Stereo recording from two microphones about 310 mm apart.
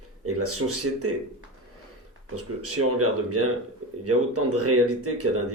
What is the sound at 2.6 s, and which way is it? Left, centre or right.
Speech, right.